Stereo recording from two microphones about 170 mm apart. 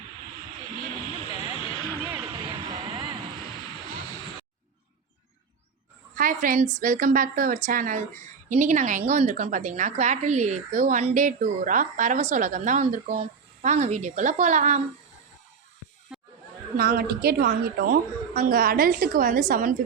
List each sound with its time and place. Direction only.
1.5 s a sound: 30° left (ahead or behind)
2.0 s vehicle: 10° right (ahead or behind)
2.3 s vehicle: 30° right (ahead or behind)
6.1 s a woman's voice: 55° right (ahead or behind)
16.1 s chatter: 5° right (ahead or behind)
16.7 s a woman's voice: 60° right (ahead or behind)